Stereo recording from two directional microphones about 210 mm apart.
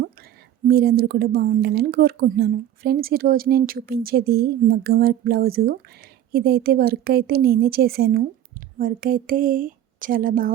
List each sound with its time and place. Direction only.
0.7 s a woman's voice: 45° right (ahead or behind)